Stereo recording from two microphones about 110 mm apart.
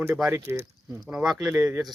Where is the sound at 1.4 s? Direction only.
30° right (ahead or behind).